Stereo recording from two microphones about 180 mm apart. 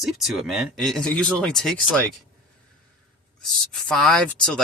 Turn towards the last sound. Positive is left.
turn(degrees=5)  # may be behind; listen again after turning